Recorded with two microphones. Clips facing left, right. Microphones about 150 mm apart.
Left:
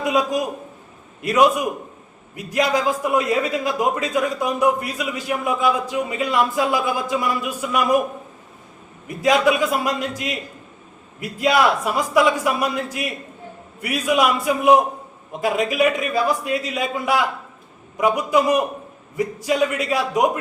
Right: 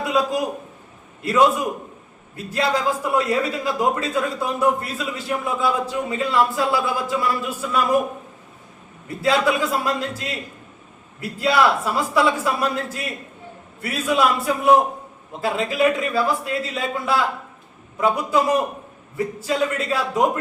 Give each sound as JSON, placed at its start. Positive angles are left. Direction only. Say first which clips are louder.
{"t": 0.0, "sound": "a sound", "louder": "left 1 dB", "side_deg": 20}
{"t": 1.2, "sound": "a man's voice", "louder": "left 1 dB", "side_deg": 15}
{"t": 9.0, "sound": "a man's voice", "louder": "left 2 dB", "side_deg": 15}